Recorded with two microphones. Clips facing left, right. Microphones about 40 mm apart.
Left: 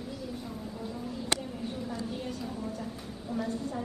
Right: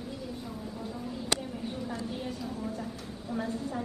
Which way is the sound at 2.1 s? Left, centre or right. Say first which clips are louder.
Even; centre.